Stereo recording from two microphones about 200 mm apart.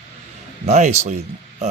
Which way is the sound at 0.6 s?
35° right (ahead or behind).